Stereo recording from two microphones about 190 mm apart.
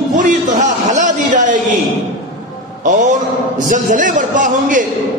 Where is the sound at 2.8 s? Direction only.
40° right (ahead or behind).